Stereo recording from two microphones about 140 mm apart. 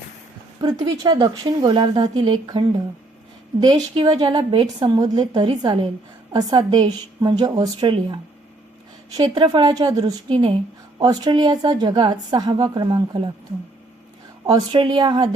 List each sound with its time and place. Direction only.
0.6 s a woman's voice: 30° right (ahead or behind)
14.4 s a woman's voice: 30° right (ahead or behind)